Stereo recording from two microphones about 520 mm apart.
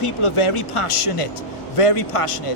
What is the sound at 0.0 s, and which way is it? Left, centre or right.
A man's voice, left.